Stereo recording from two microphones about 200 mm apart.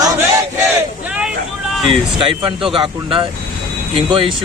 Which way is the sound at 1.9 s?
25° right (ahead or behind).